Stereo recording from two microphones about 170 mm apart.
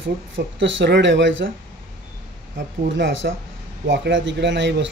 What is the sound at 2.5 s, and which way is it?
Speech, 90° right.